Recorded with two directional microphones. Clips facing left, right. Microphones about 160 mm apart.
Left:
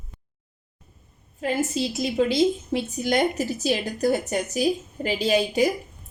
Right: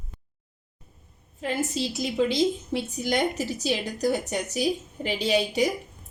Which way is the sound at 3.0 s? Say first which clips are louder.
Left 3 dB; 45° left (ahead or behind).